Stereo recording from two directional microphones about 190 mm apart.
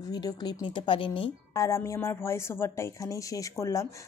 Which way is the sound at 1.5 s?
15° left (ahead or behind).